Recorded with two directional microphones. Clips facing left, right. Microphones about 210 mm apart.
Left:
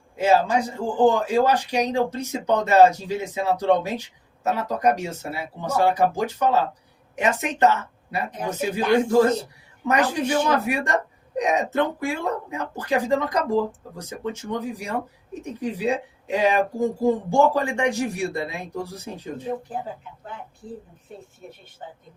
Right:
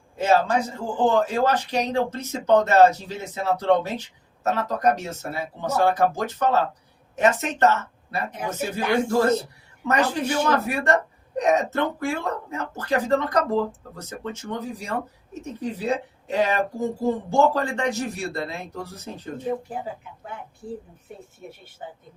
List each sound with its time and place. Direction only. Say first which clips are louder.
0.2 s speech: left 1 dB; 10° left (ahead or behind)